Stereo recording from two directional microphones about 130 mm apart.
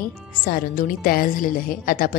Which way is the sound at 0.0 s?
90° left.